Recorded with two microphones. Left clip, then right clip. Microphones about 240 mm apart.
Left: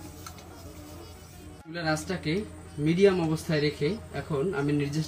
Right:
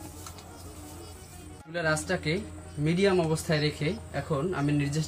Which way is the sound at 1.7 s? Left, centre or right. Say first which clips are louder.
Right 2 dB; right.